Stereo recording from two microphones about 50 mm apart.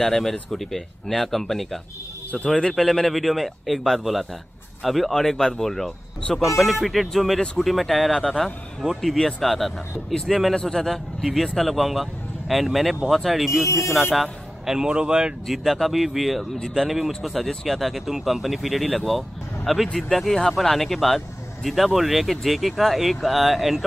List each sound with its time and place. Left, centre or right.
0.0 s a man's voice: centre
14.8 s speech: centre
15.4 s speech: centre